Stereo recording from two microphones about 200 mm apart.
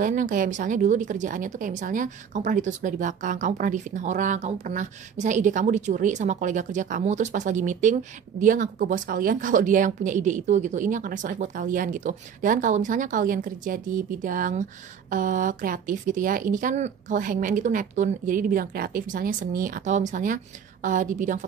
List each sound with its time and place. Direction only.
0.0 s a woman's voice: 40° right (ahead or behind)